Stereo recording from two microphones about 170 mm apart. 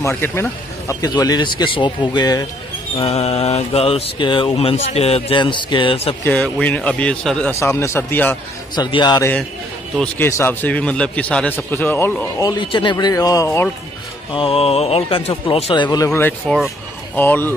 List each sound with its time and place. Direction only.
0.0 s speech: 15° left (ahead or behind)
3.0 s speech: 40° left (ahead or behind)
6.2 s a man's voice: 10° left (ahead or behind)
7.5 s a man's voice: 15° left (ahead or behind)
8.7 s speech: 25° left (ahead or behind)
10.1 s a man's voice: 15° left (ahead or behind)
12.4 s speech: 30° left (ahead or behind)
14.3 s a man's voice: 35° left (ahead or behind); by 17.6 s 10° left (ahead or behind)